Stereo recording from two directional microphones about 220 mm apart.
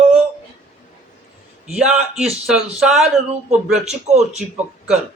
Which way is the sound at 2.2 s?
5° right (ahead or behind).